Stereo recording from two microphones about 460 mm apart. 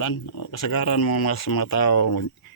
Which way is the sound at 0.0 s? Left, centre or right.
Left.